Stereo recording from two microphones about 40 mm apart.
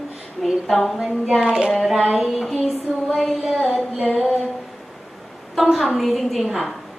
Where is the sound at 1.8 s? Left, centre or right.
Centre.